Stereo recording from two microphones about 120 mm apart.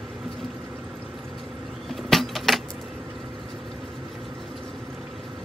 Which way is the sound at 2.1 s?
Centre (ahead or behind).